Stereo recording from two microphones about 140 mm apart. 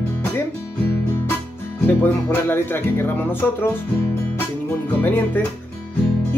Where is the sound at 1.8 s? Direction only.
15° left (ahead or behind).